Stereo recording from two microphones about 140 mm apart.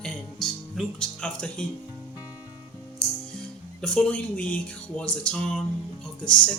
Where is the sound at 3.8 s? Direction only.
10° left (ahead or behind).